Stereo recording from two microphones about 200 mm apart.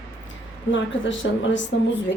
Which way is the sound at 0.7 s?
65° left (ahead or behind).